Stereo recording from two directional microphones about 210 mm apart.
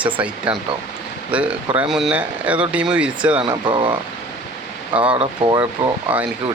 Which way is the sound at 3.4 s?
20° right (ahead or behind).